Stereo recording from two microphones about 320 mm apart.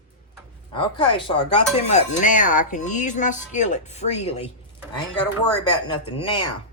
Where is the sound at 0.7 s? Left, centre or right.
Centre.